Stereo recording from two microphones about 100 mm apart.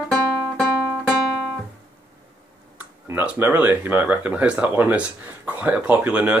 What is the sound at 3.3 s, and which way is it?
Speech, 20° right (ahead or behind).